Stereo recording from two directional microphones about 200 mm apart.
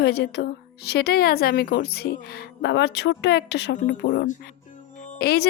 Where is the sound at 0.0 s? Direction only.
55° left (ahead or behind).